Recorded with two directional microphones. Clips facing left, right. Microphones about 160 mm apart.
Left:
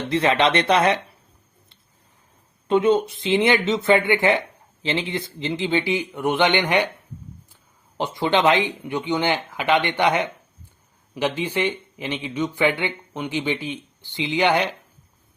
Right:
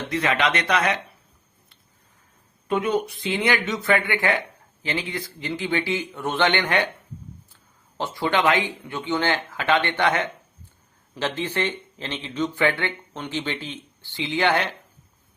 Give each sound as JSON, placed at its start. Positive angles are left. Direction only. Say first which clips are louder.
{"t": 0.1, "sound": "speech", "louder": "left 4 dB", "side_deg": 30}
{"t": 2.6, "sound": "speech", "louder": "left 5 dB", "side_deg": 25}